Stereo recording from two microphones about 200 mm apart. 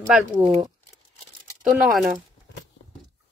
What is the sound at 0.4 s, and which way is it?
Speech, 25° right (ahead or behind).